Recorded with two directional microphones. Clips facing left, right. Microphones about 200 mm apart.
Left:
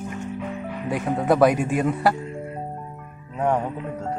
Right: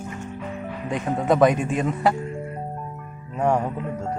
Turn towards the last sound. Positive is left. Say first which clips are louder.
# right 1 dB
turn(degrees=0)  # may be behind; listen again after turning